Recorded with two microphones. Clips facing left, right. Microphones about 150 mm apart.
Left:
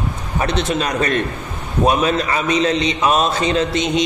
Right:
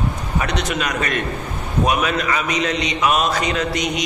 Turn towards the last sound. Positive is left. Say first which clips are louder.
# left 4 dB
turn(degrees=25)  # may be behind; listen again after turning